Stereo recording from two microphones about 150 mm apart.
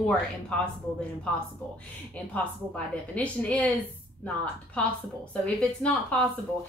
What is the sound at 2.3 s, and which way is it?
A woman's voice, 10° left (ahead or behind).